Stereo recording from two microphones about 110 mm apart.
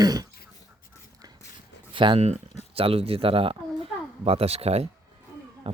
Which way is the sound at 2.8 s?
60° right (ahead or behind).